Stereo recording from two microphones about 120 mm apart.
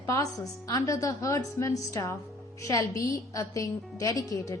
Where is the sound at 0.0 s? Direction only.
25° left (ahead or behind).